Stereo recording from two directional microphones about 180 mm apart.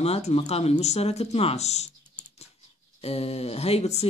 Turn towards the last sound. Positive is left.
turn(degrees=35)  # may be behind; listen again after turning